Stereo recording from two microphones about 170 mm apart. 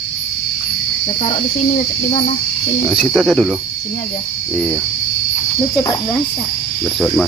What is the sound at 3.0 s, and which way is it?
Speech, centre (ahead or behind).